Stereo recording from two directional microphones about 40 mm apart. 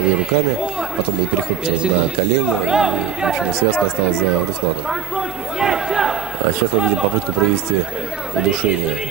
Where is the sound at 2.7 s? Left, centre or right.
Centre.